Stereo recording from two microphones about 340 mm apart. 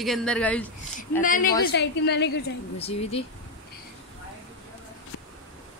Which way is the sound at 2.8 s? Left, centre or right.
Centre.